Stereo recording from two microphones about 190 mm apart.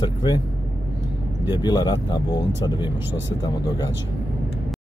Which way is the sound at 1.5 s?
20° left (ahead or behind).